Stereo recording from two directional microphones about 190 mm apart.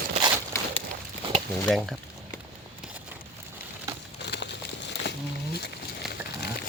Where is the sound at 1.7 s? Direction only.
Centre (ahead or behind).